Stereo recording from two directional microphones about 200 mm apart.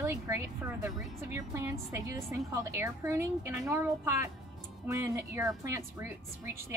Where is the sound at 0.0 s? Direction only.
15° right (ahead or behind).